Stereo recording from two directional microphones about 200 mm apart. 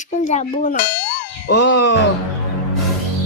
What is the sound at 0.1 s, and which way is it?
Speech, 35° left (ahead or behind).